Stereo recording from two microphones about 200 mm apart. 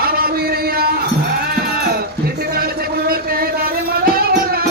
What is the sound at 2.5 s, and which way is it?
Music, 50° right (ahead or behind).